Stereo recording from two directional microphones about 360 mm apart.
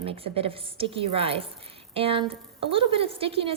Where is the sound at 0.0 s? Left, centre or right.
Centre.